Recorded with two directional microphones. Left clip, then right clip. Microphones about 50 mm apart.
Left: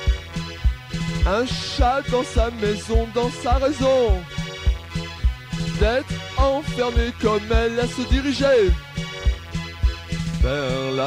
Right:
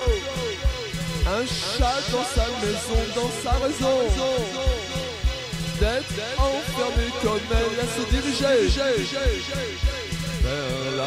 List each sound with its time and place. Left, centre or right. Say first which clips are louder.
0.9 s speech: left 5 dB; left
3.2 s music: left 5 dB; left
5.7 s speech: left 4 dB; left
10.4 s music: left 4 dB; left